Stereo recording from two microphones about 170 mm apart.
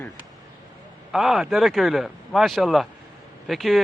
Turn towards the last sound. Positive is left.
turn(degrees=0)  # may be behind; listen again after turning